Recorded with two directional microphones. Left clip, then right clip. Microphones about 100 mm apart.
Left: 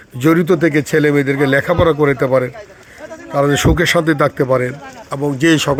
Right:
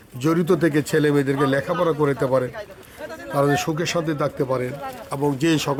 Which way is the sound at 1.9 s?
20° left (ahead or behind).